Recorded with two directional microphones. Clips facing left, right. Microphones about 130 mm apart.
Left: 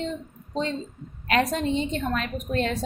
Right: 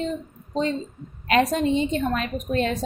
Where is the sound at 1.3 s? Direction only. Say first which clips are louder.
Right 3 dB; 20° right (ahead or behind).